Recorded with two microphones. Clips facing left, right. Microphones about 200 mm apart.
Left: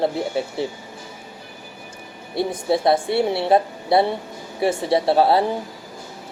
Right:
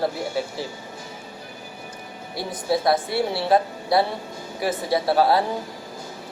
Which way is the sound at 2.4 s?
25° left (ahead or behind).